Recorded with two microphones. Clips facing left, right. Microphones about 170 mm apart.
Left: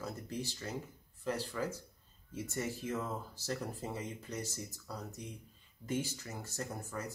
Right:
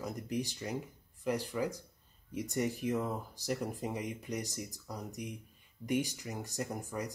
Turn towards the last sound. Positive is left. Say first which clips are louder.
# right 3 dB
turn(degrees=-15)  # may be behind; listen again after turning